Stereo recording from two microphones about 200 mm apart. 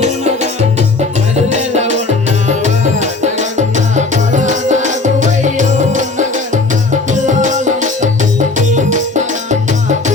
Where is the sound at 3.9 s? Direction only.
40° right (ahead or behind).